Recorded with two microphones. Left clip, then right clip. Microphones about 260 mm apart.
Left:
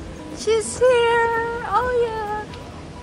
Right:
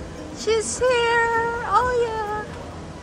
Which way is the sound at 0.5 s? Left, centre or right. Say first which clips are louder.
Left 3 dB; centre.